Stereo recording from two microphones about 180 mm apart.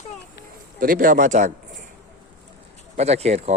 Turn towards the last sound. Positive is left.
turn(degrees=-35)  # may be behind; listen again after turning